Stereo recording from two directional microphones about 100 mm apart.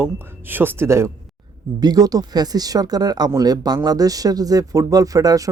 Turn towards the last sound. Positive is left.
turn(degrees=-35)  # may be behind; listen again after turning